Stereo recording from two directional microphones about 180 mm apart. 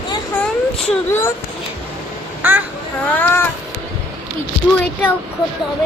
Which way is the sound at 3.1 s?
10° left (ahead or behind).